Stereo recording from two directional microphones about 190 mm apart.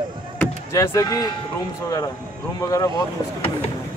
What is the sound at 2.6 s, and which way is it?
Speech, 15° left (ahead or behind).